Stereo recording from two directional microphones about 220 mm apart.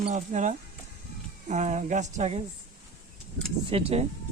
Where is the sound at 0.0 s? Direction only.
30° right (ahead or behind).